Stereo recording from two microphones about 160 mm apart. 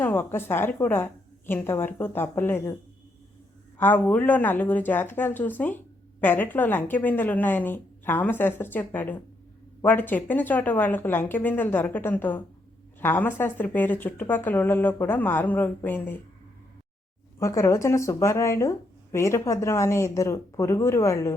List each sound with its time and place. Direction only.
0.0 s a woman's voice: 15° left (ahead or behind)
3.8 s a woman's voice: 10° left (ahead or behind)
17.4 s speech: 20° left (ahead or behind)